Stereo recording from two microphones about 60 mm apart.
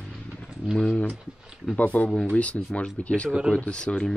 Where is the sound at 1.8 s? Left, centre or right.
Left.